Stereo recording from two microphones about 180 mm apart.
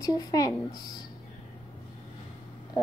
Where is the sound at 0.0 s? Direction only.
20° left (ahead or behind).